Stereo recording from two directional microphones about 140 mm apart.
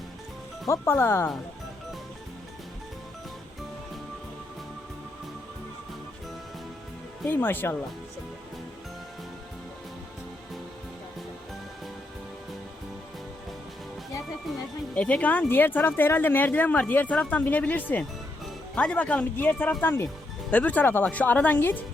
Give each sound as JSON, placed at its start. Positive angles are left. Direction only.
{"t": 0.7, "sound": "speech", "side_deg": 15}
{"t": 7.3, "sound": "speech", "side_deg": 15}
{"t": 14.9, "sound": "speech", "side_deg": 10}